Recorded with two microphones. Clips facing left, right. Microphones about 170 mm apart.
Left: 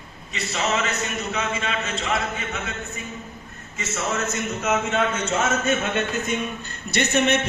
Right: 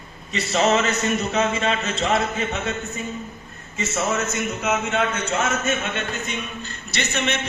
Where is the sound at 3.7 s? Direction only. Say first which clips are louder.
Right 4 dB; 30° right (ahead or behind).